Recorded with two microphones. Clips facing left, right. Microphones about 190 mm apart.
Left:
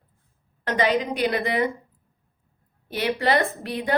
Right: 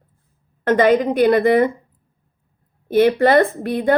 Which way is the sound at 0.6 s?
50° right (ahead or behind).